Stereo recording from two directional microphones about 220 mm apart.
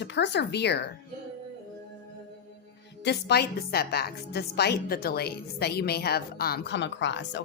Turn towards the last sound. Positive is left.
turn(degrees=55)  # may be behind; listen again after turning